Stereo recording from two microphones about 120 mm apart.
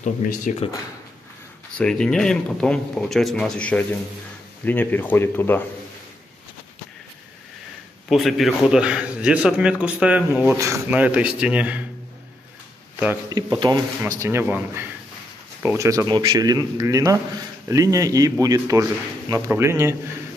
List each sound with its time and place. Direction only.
0.0 s speech: 90° left
1.8 s speech: 10° left (ahead or behind)
8.1 s a man's voice: centre (ahead or behind)
13.3 s speech: 35° right (ahead or behind)
14.2 s a man's voice: 20° right (ahead or behind)